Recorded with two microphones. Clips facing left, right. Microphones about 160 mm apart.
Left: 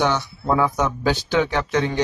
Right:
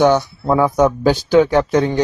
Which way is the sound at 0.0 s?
45° right (ahead or behind).